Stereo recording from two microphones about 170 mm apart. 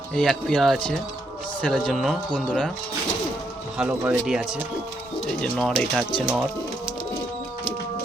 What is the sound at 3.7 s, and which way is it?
Speech, 10° right (ahead or behind).